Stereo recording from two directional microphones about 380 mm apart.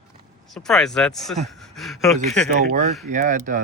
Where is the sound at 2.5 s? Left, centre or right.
Centre.